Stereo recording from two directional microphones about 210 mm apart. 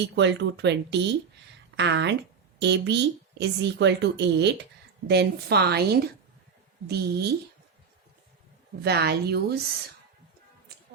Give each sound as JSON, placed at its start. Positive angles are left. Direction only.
{"t": 0.2, "sound": "a woman's voice", "side_deg": -55}
{"t": 8.8, "sound": "a woman's voice", "side_deg": -50}